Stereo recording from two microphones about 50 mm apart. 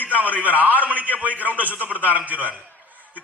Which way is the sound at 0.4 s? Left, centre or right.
Right.